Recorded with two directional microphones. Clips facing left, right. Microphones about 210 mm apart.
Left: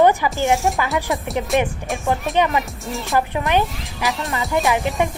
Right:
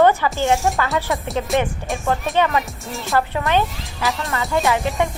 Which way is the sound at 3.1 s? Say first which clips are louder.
Even; 15° left (ahead or behind).